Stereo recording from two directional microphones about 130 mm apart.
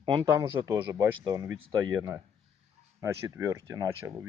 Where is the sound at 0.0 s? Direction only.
35° right (ahead or behind).